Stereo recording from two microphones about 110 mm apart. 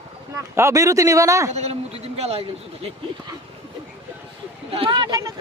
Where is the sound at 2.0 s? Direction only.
70° right (ahead or behind).